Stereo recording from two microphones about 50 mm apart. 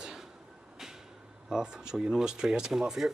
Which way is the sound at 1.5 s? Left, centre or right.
Centre.